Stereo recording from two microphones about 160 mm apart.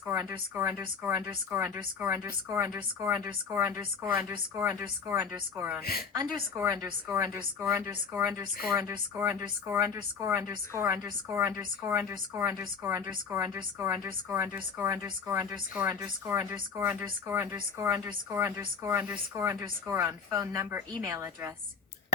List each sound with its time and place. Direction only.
0.1 s a woman's voice: 15° right (ahead or behind)
5.8 s a woman's voice: 70° left (ahead or behind)
6.1 s a woman's voice: 20° right (ahead or behind)